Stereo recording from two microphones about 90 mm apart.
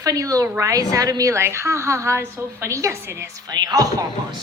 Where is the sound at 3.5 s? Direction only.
50° right (ahead or behind).